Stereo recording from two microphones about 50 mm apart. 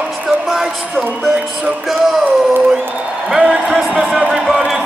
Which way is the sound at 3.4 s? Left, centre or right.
Right.